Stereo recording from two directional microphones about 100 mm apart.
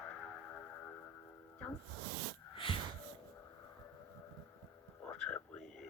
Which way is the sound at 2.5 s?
55° left (ahead or behind).